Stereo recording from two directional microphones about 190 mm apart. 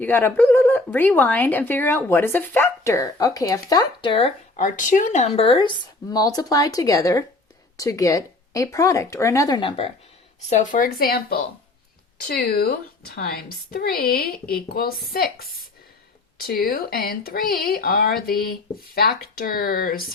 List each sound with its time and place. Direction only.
0.0 s speech: 10° left (ahead or behind); by 4.3 s 25° left (ahead or behind)
4.5 s speech: 40° left (ahead or behind)
10.5 s speech: 40° left (ahead or behind)